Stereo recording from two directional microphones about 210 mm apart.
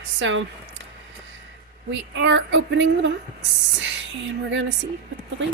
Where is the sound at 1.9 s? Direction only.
60° right (ahead or behind).